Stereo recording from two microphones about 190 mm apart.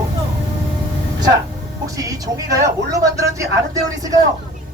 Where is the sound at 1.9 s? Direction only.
20° right (ahead or behind).